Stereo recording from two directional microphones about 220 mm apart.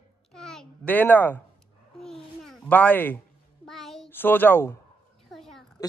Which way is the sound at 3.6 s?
Centre (ahead or behind).